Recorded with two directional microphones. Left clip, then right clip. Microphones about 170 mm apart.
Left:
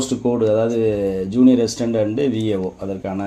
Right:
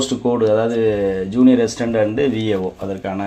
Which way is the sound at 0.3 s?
15° left (ahead or behind).